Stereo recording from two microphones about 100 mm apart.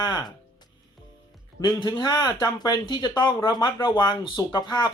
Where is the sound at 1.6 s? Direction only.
45° left (ahead or behind).